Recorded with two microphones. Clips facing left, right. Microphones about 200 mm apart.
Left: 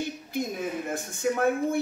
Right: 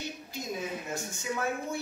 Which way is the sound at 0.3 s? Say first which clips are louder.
Left 5 dB; 55° left (ahead or behind).